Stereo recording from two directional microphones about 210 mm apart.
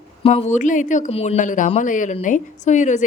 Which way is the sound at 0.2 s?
30° left (ahead or behind).